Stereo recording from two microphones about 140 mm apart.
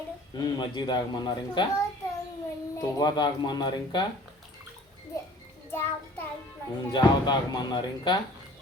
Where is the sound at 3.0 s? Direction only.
30° left (ahead or behind).